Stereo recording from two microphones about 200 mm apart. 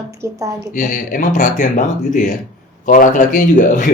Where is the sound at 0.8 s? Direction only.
40° left (ahead or behind).